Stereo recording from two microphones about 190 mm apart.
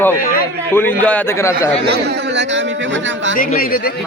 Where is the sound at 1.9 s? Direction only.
60° right (ahead or behind).